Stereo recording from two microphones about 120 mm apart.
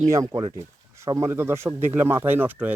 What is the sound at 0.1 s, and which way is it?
Speech, 30° right (ahead or behind).